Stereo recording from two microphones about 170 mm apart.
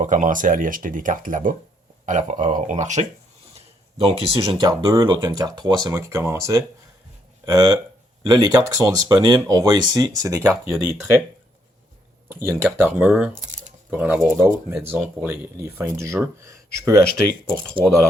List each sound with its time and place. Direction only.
0.0 s speech: 50° right (ahead or behind)
3.9 s speech: 35° right (ahead or behind)
12.5 s speech: 15° right (ahead or behind)
13.4 s a sound: 45° right (ahead or behind)
13.9 s speech: 10° right (ahead or behind)
17.8 s speech: 30° right (ahead or behind)